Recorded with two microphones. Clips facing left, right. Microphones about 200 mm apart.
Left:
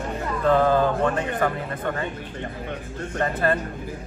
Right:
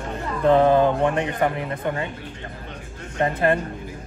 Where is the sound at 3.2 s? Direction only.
20° right (ahead or behind).